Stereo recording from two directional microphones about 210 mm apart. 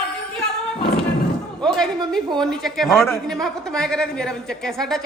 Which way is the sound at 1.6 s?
5° left (ahead or behind).